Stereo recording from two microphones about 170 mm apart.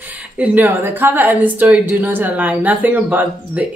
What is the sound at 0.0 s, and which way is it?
A woman's voice, 10° right (ahead or behind).